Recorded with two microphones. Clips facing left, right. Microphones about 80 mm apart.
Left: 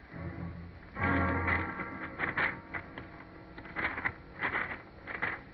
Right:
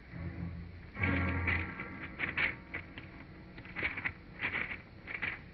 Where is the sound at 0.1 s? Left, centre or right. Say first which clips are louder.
Left 2 dB; left.